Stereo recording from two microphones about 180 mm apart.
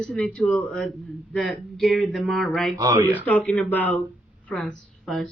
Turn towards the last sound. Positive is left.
turn(degrees=0)  # may be behind; listen again after turning